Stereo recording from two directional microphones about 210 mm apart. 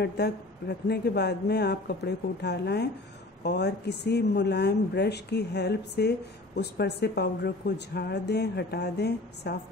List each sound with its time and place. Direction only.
0.0 s speech: 50° left (ahead or behind)